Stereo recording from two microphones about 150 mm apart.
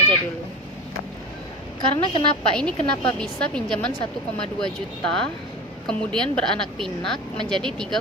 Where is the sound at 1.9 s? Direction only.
35° left (ahead or behind).